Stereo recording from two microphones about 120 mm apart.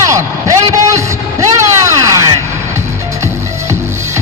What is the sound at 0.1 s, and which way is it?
Vehicle, 25° right (ahead or behind).